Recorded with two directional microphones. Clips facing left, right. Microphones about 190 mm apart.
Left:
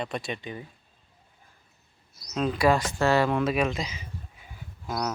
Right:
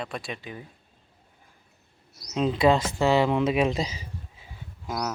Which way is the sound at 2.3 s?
20° right (ahead or behind).